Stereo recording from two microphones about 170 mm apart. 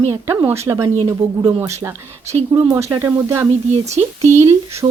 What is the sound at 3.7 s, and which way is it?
Speech, 40° right (ahead or behind).